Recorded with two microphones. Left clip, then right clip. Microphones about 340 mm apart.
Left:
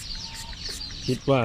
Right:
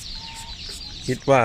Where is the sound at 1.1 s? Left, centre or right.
Right.